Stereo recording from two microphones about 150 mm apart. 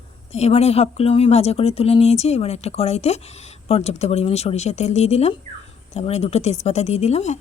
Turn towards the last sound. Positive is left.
turn(degrees=45)  # may be behind; listen again after turning